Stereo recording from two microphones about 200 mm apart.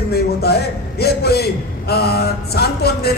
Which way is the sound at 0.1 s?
50° left (ahead or behind).